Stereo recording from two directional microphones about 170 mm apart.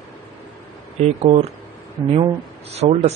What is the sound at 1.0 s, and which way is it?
Speech, 40° right (ahead or behind).